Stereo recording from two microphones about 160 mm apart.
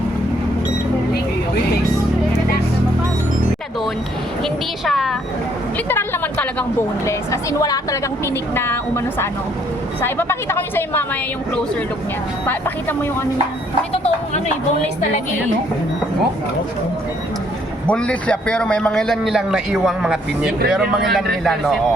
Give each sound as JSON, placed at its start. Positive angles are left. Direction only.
{"t": 4.4, "sound": "a sound", "side_deg": 0}
{"t": 5.9, "sound": "a woman's voice", "side_deg": 10}
{"t": 13.9, "sound": "speech", "side_deg": 40}
{"t": 17.8, "sound": "a man's voice", "side_deg": 10}